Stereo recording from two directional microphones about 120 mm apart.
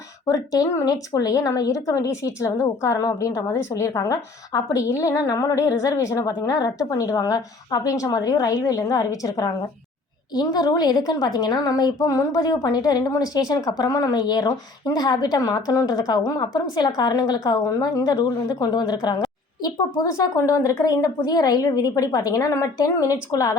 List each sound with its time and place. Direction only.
0.3 s a woman's voice: 30° left (ahead or behind)